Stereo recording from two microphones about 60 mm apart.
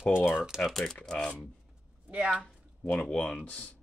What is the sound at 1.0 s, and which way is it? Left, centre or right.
Speech, centre.